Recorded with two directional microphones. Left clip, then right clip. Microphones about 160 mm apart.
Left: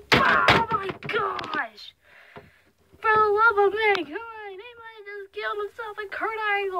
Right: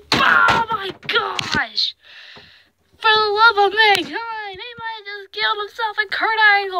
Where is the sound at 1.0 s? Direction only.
10° right (ahead or behind).